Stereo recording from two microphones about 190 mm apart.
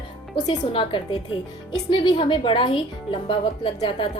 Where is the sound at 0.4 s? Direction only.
25° left (ahead or behind).